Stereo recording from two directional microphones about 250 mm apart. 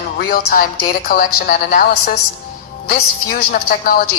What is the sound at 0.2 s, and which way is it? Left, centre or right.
A woman's voice, left.